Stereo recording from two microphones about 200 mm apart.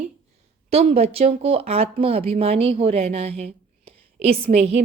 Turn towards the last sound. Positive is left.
turn(degrees=-30)  # may be behind; listen again after turning